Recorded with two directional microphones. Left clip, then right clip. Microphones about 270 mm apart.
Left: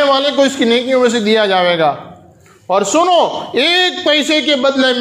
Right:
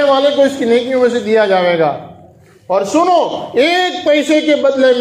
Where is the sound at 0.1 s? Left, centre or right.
Left.